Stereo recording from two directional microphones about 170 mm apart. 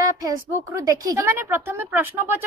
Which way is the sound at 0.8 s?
20° right (ahead or behind).